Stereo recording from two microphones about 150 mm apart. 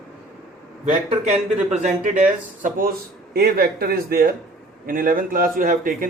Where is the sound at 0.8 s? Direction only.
50° right (ahead or behind); by 2.9 s 65° right (ahead or behind).